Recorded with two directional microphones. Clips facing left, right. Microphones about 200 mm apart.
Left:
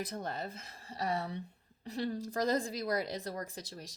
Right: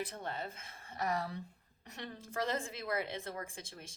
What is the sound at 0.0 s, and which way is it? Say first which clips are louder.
Speech: left 2 dB; 40° left (ahead or behind).